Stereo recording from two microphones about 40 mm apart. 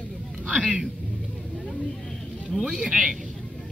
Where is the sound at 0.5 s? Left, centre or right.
Right.